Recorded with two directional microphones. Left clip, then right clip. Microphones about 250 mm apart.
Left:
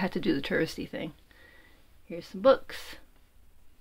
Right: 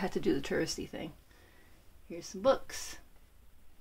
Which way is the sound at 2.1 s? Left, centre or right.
Centre.